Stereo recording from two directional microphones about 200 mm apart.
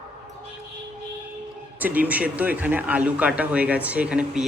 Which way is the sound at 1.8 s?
10° right (ahead or behind).